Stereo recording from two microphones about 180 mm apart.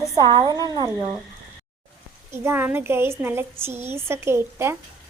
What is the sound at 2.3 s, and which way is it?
A woman's voice, 15° right (ahead or behind).